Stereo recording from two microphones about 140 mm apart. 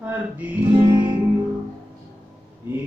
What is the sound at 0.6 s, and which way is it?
Music, 30° right (ahead or behind).